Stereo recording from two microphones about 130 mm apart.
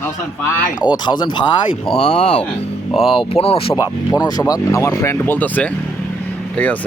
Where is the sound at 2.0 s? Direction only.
55° left (ahead or behind).